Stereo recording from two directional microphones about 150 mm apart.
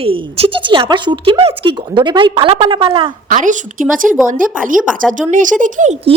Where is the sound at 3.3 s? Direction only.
60° right (ahead or behind).